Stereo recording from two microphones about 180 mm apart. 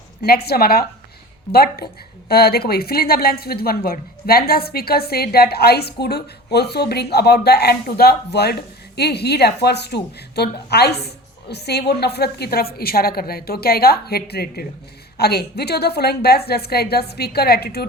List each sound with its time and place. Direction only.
0.2 s a woman's voice: 60° left (ahead or behind)